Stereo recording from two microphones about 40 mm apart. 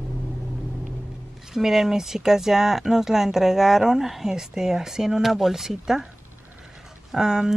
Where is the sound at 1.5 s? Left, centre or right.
Centre.